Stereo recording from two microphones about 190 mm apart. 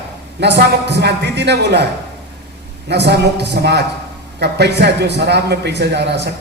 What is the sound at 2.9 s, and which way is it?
Speech, 60° right (ahead or behind).